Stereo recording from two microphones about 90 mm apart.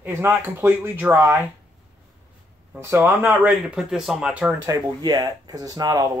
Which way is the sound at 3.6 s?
5° right (ahead or behind).